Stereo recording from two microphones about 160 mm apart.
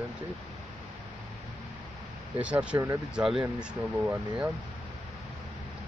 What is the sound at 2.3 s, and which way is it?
Speech, 10° right (ahead or behind).